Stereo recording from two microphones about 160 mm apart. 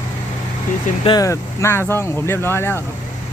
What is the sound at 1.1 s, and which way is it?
Speech, 20° left (ahead or behind).